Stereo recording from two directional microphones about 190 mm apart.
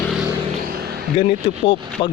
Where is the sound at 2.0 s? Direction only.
30° left (ahead or behind).